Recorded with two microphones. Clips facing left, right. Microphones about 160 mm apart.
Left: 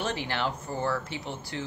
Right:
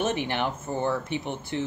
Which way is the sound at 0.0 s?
20° right (ahead or behind).